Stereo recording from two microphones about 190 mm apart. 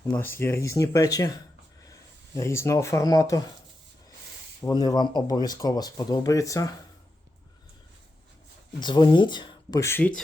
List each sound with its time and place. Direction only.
0.1 s speech: 10° left (ahead or behind)
2.3 s speech: 15° left (ahead or behind)
4.6 s speech: 20° left (ahead or behind)
8.8 s speech: 25° left (ahead or behind); by 10.2 s 5° left (ahead or behind)